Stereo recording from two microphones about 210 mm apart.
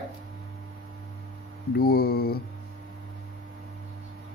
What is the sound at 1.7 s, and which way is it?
Mantra, 45° left (ahead or behind).